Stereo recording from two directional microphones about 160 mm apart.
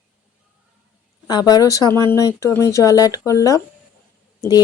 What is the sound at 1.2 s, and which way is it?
Speech, 25° left (ahead or behind).